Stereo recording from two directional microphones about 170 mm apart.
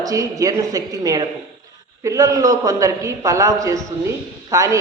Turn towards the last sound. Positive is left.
turn(degrees=-20)  # may be behind; listen again after turning